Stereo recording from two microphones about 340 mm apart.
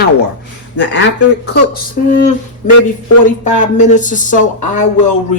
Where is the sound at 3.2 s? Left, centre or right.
Left.